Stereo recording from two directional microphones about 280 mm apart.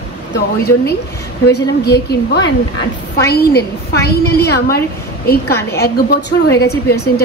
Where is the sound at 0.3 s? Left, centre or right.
Left.